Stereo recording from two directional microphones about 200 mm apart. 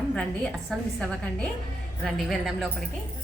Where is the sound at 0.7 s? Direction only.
Centre (ahead or behind).